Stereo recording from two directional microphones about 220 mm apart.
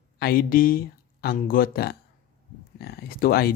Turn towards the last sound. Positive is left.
turn(degrees=45)  # may be behind; listen again after turning